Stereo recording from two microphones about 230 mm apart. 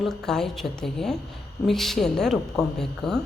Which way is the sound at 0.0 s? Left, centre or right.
Centre.